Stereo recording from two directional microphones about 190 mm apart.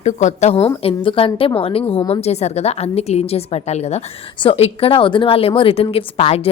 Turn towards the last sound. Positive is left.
turn(degrees=30)  # may be behind; listen again after turning